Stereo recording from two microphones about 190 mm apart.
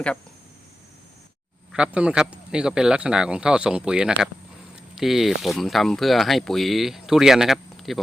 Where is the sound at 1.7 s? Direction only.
5° right (ahead or behind).